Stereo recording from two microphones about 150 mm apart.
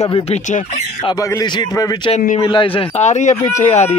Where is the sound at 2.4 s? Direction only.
35° left (ahead or behind).